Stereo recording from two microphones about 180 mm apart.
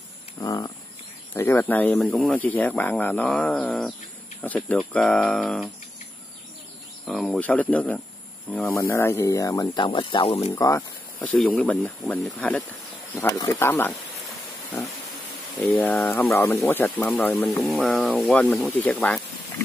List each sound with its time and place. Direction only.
0.4 s a sound: 20° left (ahead or behind)
1.3 s speech: 15° left (ahead or behind)
7.1 s speech: centre (ahead or behind); by 10.5 s 30° left (ahead or behind)
10.5 s speech: 15° left (ahead or behind)
13.2 s speech: 15° left (ahead or behind)
15.7 s speech: 10° left (ahead or behind)